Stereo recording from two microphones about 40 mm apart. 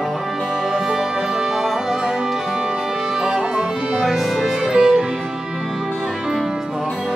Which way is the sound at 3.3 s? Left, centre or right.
Centre.